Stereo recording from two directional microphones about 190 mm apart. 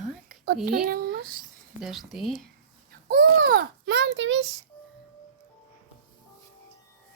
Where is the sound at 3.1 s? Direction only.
55° right (ahead or behind).